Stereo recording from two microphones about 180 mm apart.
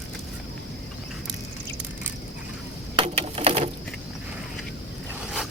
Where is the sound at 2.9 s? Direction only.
30° right (ahead or behind).